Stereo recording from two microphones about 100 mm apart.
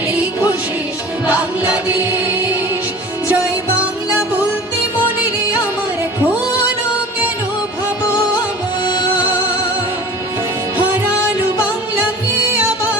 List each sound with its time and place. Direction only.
1.3 s music: 15° right (ahead or behind)
8.8 s music: 50° left (ahead or behind)
10.8 s music: 15° right (ahead or behind)